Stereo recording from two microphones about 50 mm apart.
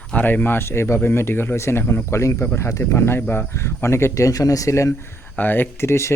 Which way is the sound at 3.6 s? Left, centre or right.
Left.